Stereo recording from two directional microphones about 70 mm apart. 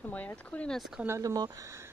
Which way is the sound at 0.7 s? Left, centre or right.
Centre.